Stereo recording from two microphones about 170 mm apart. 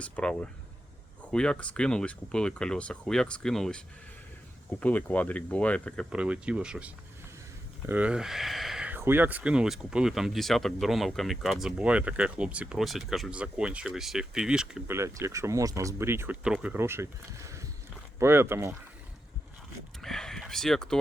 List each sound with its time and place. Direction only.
0.0 s speech: 5° left (ahead or behind)
6.1 s speech: 5° right (ahead or behind)
14.9 s speech: 15° right (ahead or behind)
20.0 s speech: centre (ahead or behind)